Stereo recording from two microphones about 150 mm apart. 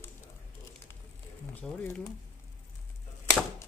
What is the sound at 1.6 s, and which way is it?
Speech, 5° left (ahead or behind).